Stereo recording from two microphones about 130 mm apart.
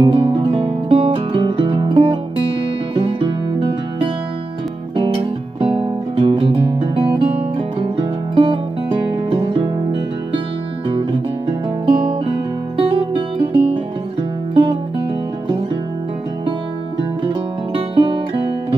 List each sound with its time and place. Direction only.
0.0 s music: 45° right (ahead or behind)
5.6 s guitar: 45° right (ahead or behind)
10.9 s guitar: 45° right (ahead or behind)
14.5 s music: 40° right (ahead or behind)
17.9 s music: 40° right (ahead or behind)